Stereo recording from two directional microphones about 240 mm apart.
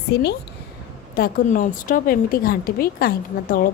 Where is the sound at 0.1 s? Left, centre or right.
Left.